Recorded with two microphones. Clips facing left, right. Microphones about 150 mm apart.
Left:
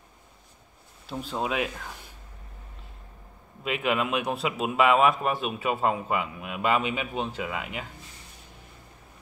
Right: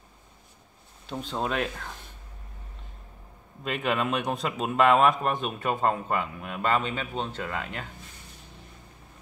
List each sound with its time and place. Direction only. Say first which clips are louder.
1.0 s a man's voice: even; 5° left (ahead or behind)
3.6 s a man's voice: left 1 dB; 5° left (ahead or behind)